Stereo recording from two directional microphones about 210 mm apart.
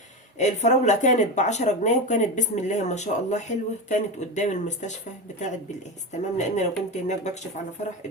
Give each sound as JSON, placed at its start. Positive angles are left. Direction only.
{"t": 0.3, "sound": "speech", "side_deg": 35}
{"t": 6.1, "sound": "speech", "side_deg": 35}